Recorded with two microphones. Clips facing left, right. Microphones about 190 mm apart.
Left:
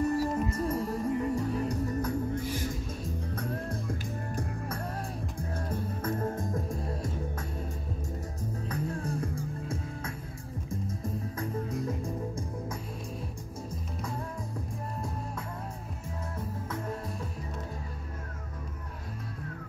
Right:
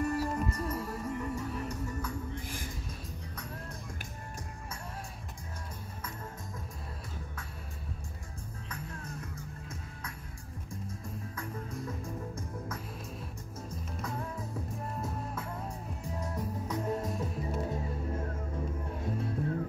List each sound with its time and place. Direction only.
0.0 s music: 15° left (ahead or behind)
0.4 s music: 30° left (ahead or behind)
3.3 s music: 55° left (ahead or behind)
5.7 s music: 50° left (ahead or behind)
8.6 s music: 35° left (ahead or behind)
16.6 s music: 15° right (ahead or behind)